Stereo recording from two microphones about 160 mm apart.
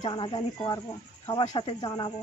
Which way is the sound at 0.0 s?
30° left (ahead or behind).